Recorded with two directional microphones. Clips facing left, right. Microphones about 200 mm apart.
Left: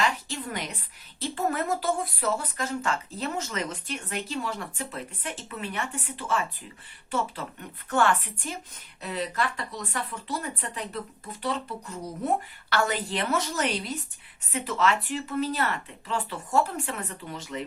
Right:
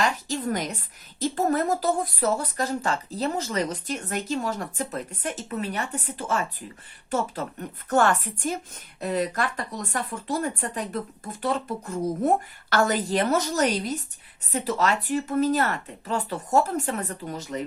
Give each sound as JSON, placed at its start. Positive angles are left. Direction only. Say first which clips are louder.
{"t": 0.0, "sound": "a woman's voice", "louder": "right 3 dB", "side_deg": -45}
{"t": 7.9, "sound": "a woman's voice", "louder": "right 3 dB", "side_deg": -40}